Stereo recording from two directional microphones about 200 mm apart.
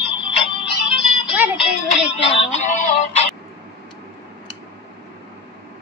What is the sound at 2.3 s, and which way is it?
Music, 30° left (ahead or behind).